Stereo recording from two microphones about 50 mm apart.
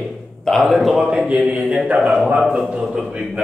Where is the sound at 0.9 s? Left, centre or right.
Centre.